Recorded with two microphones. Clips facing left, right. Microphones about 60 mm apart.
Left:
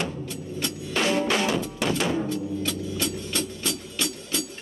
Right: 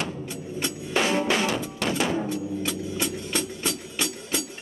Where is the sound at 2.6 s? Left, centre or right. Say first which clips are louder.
Even; centre.